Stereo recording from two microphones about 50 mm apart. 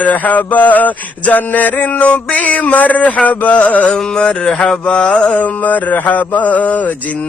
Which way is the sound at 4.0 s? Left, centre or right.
Centre.